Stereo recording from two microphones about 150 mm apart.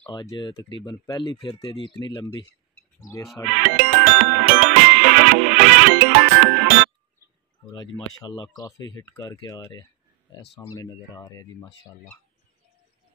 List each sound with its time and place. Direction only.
0.0 s speech: 30° left (ahead or behind)
3.5 s music: 65° right (ahead or behind)
7.7 s speech: 25° left (ahead or behind)